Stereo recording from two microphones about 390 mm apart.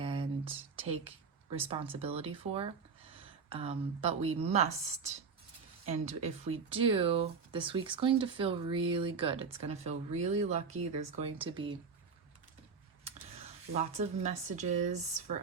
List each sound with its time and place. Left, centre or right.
0.0 s speech: centre
13.7 s speech: centre